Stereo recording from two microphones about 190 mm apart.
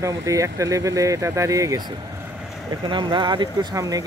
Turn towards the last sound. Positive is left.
turn(degrees=-20)  # may be behind; listen again after turning